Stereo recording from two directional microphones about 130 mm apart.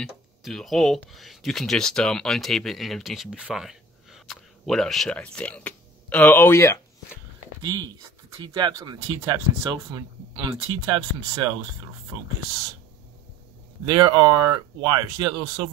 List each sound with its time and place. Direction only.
0.4 s speech: centre (ahead or behind); by 6.8 s 20° left (ahead or behind)
7.6 s speech: 35° right (ahead or behind)
13.8 s speech: 35° right (ahead or behind)